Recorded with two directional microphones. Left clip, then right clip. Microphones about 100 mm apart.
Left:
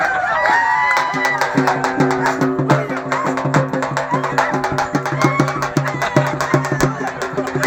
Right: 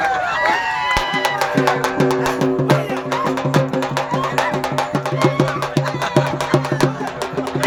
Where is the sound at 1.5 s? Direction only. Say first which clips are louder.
Even; 10° left (ahead or behind).